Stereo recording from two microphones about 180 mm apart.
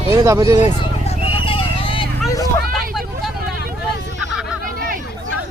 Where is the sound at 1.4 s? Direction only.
30° left (ahead or behind).